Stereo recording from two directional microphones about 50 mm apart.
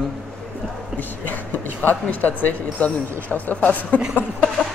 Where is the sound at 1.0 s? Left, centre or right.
Left.